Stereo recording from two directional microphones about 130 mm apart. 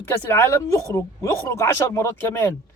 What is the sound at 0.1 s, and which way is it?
Speech, 20° left (ahead or behind).